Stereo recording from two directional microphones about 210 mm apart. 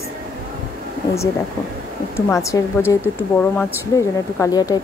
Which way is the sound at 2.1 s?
15° left (ahead or behind).